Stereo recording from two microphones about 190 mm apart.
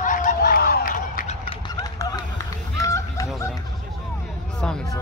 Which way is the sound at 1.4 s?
20° left (ahead or behind).